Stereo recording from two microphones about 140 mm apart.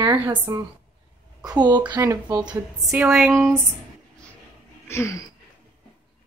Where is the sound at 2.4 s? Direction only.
5° right (ahead or behind).